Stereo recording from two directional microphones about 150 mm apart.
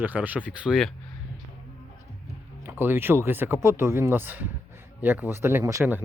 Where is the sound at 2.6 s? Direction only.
15° right (ahead or behind).